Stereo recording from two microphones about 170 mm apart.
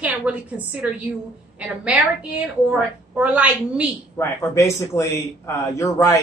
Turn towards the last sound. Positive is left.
turn(degrees=15)  # may be behind; listen again after turning